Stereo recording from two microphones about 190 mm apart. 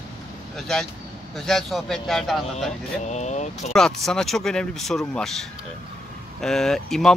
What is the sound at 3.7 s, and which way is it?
Speech, 5° left (ahead or behind).